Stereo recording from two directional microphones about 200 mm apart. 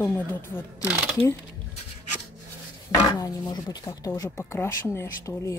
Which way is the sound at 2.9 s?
20° left (ahead or behind).